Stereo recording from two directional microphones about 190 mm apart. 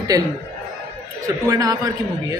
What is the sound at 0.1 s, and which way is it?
Music, 20° right (ahead or behind).